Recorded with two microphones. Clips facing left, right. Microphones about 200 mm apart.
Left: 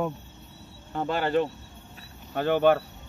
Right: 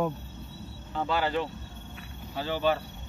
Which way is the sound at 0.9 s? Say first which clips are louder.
Left 3 dB; 50° left (ahead or behind).